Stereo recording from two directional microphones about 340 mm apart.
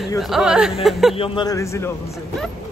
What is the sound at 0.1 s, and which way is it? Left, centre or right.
Speech, centre.